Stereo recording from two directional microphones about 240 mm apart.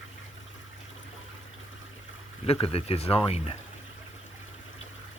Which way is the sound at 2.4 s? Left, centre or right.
Left.